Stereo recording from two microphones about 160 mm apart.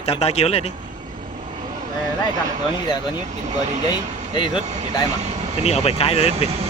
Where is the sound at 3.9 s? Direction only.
30° left (ahead or behind).